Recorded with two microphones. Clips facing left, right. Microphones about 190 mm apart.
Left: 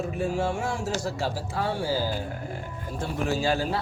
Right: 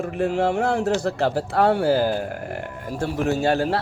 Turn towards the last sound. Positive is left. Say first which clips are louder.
# right 5 dB
turn(degrees=-65)  # may be behind; listen again after turning